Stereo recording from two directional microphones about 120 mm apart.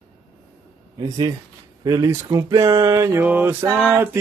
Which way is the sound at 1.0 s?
35° right (ahead or behind).